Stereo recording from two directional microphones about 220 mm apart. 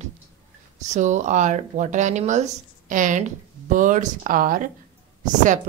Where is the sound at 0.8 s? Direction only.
35° right (ahead or behind).